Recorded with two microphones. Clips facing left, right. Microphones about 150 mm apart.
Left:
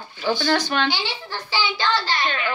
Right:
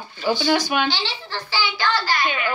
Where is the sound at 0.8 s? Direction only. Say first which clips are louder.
Even; 15° left (ahead or behind).